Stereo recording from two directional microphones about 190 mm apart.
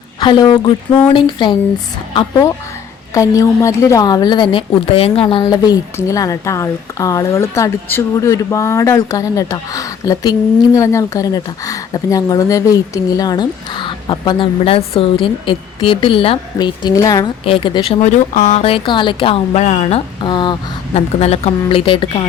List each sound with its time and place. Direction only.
0.2 s speech: 25° left (ahead or behind)
3.2 s a woman's voice: 15° left (ahead or behind)
18.0 s speech: 40° left (ahead or behind)